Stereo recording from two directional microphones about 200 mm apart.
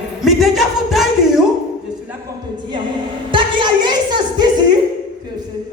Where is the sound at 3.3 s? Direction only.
25° right (ahead or behind).